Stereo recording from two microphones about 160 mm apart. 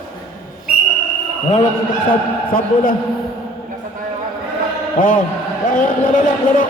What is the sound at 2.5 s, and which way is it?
Speech, 60° left (ahead or behind).